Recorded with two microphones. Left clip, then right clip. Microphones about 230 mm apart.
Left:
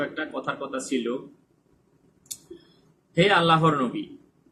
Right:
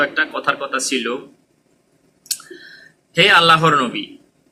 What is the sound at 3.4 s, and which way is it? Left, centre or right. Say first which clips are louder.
Speech: right 8 dB; centre.